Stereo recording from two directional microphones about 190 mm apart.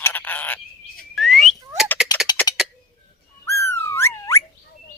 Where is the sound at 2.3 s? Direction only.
20° left (ahead or behind).